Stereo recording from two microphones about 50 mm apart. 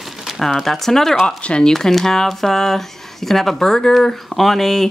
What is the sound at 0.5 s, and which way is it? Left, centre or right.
Speech, centre.